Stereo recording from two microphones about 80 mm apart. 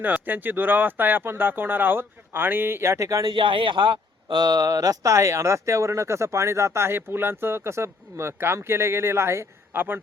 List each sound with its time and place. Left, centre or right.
0.0 s speech: right
3.2 s speech: right